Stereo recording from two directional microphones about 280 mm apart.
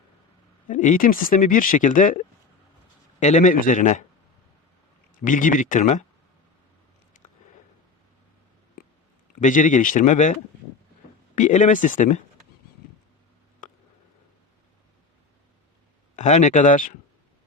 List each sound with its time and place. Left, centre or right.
0.7 s speech: left
5.2 s speech: left
7.1 s a sound: left
9.4 s speech: left
11.3 s speech: left
16.1 s speech: left